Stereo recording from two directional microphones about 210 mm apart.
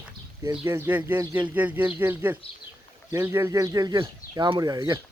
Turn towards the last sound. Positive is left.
turn(degrees=-15)  # may be behind; listen again after turning